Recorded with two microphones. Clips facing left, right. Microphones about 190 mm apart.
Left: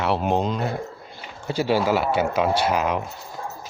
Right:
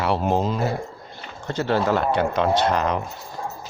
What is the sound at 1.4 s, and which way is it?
Speech, 10° left (ahead or behind).